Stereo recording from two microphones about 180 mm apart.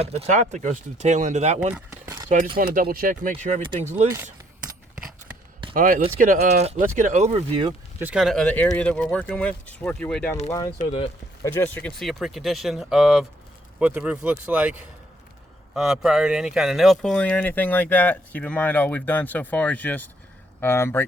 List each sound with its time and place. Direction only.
0.0 s speech: 35° right (ahead or behind)
1.9 s keys jangling: 15° right (ahead or behind)
2.6 s speech: 55° right (ahead or behind)
3.6 s speech: 30° right (ahead or behind)
5.7 s speech: 50° right (ahead or behind); by 7.7 s 30° right (ahead or behind)
7.9 s speech: 5° right (ahead or behind)
10.8 s speech: 45° left (ahead or behind)
11.4 s speech: 10° left (ahead or behind)